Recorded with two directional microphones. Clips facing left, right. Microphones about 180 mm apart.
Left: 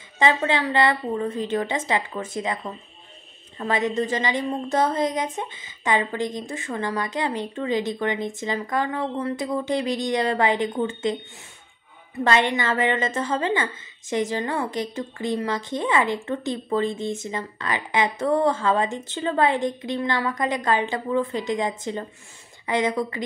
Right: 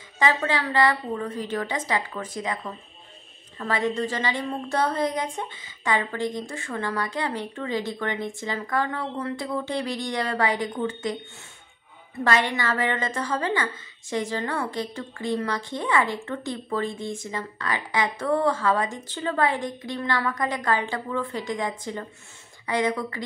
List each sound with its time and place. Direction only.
0.2 s a woman's voice: 25° left (ahead or behind)
12.3 s a woman's voice: 20° left (ahead or behind)